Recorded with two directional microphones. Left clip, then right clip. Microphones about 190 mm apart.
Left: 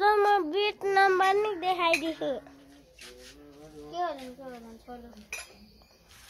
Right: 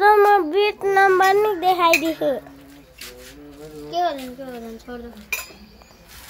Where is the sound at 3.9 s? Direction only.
50° right (ahead or behind).